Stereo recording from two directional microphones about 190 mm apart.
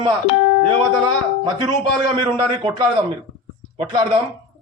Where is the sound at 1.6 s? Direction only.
25° right (ahead or behind).